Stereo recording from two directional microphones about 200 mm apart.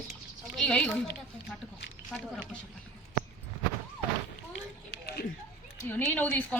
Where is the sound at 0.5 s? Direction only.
5° left (ahead or behind).